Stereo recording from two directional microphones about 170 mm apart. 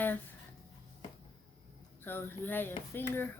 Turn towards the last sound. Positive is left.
turn(degrees=10)  # may be behind; listen again after turning